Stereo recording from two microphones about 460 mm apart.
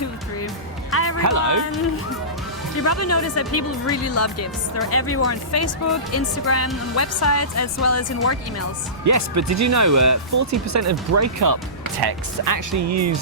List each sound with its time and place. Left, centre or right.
0.9 s music: left
1.2 s music: right
2.8 s speech: left
9.0 s speech: right